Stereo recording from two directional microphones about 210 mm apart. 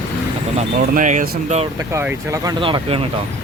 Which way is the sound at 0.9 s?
35° right (ahead or behind).